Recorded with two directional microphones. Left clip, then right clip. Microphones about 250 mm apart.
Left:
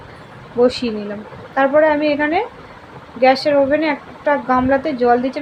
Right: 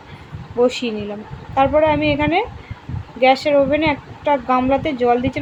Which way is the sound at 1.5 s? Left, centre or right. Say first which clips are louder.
Left 1 dB; centre.